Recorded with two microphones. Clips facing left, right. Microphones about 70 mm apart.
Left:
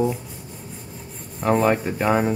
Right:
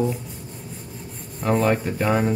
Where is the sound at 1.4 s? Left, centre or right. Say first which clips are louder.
Left 2 dB; centre.